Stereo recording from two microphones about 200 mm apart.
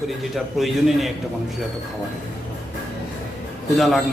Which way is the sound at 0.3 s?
Centre (ahead or behind).